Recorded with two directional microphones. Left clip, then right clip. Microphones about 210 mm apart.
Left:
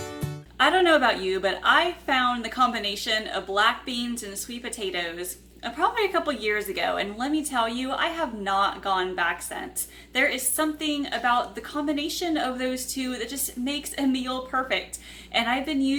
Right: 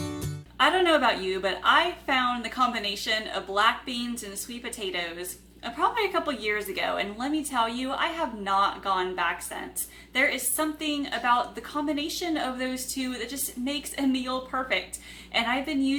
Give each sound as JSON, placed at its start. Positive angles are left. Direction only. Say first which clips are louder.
{"t": 0.6, "sound": "a woman's voice", "louder": "left 2 dB", "side_deg": 0}
{"t": 15.3, "sound": "a woman's voice", "louder": "left 2 dB", "side_deg": 0}